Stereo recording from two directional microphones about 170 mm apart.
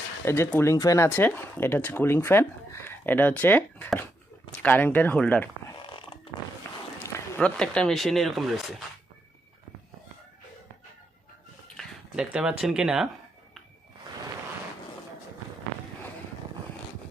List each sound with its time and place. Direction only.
0.3 s speech: 15° left (ahead or behind)
5.8 s a sound: 30° left (ahead or behind)
7.0 s speech: 10° left (ahead or behind)
11.8 s speech: 5° right (ahead or behind)